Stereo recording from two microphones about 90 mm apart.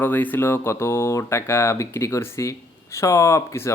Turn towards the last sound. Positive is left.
turn(degrees=30)  # may be behind; listen again after turning